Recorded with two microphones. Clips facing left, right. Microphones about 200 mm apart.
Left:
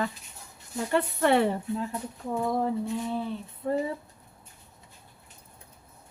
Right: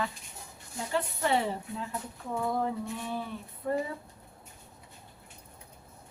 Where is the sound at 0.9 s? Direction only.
60° left (ahead or behind).